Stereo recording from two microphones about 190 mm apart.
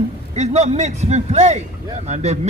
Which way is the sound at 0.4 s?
35° right (ahead or behind).